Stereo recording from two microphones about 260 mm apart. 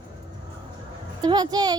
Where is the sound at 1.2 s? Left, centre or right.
Centre.